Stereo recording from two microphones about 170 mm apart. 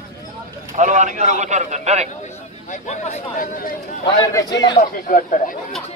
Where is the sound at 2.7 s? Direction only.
45° left (ahead or behind).